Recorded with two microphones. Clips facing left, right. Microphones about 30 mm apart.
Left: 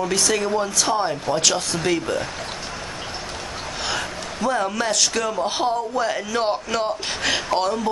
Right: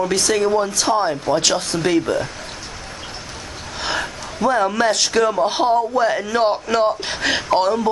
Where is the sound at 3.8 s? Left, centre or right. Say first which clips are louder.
Right 4 dB; centre.